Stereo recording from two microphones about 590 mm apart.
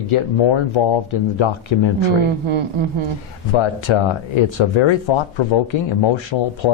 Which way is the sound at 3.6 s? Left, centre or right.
Left.